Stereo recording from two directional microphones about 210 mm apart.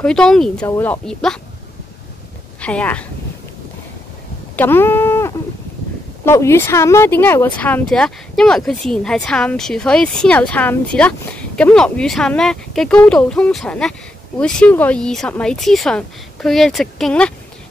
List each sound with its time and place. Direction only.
0.0 s speech: 5° left (ahead or behind)
2.6 s speech: 5° left (ahead or behind)
4.6 s a sound: 10° left (ahead or behind)
6.2 s speech: 10° left (ahead or behind)